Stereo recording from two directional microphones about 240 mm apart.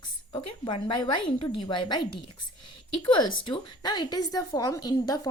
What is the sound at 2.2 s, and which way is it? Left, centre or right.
Whispering, left.